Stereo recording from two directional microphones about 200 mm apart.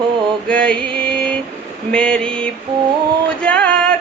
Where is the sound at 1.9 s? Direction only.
5° left (ahead or behind).